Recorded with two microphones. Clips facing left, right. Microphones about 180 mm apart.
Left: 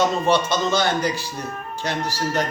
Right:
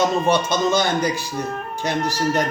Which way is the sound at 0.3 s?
15° right (ahead or behind).